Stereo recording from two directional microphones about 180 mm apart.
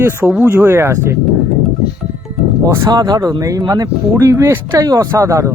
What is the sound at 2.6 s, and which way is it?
Speech, 20° right (ahead or behind).